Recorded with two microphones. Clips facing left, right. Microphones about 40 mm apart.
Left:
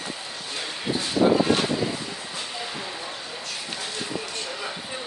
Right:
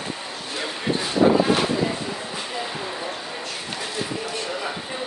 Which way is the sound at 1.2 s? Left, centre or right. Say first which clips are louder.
Right 2 dB; right.